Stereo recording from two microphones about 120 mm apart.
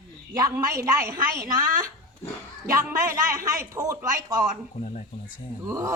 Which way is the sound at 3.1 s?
25° right (ahead or behind).